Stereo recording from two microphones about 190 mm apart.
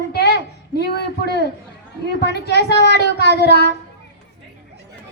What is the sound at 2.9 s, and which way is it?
Speech, 60° left (ahead or behind).